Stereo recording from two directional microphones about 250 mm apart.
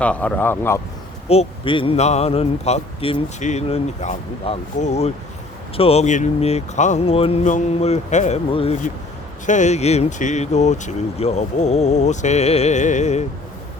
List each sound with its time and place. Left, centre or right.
0.0 s speech: centre
1.3 s speech: left